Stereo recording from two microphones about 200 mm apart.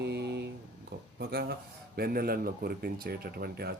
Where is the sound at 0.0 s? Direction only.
55° right (ahead or behind).